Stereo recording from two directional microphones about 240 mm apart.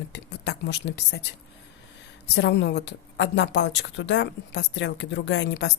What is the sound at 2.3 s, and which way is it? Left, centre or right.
A woman's voice, left.